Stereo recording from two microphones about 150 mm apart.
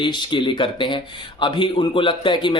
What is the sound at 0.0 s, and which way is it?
Speech, 30° left (ahead or behind).